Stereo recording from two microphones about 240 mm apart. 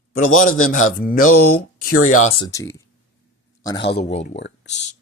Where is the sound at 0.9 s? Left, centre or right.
Left.